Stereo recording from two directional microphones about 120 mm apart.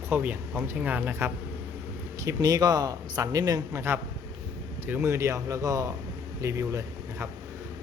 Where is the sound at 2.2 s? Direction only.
30° right (ahead or behind).